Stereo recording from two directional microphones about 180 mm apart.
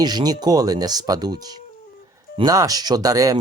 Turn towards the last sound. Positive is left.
turn(degrees=-20)  # may be behind; listen again after turning